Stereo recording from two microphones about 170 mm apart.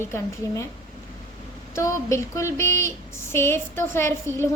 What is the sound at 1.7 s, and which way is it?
A woman's voice, 15° left (ahead or behind).